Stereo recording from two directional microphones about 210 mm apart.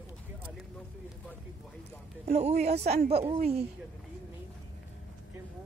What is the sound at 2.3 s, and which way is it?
A woman's voice, 30° right (ahead or behind).